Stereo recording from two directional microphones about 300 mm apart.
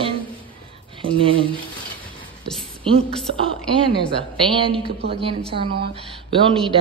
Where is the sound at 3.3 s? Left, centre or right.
Centre.